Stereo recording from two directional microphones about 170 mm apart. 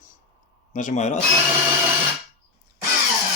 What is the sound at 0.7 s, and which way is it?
Speech, 50° left (ahead or behind).